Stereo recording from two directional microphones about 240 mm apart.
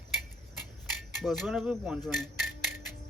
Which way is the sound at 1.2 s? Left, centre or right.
Centre.